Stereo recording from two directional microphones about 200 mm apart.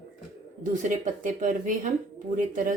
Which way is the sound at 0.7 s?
40° right (ahead or behind).